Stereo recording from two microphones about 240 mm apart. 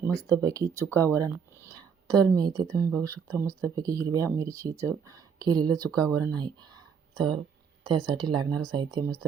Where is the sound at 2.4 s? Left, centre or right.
Centre.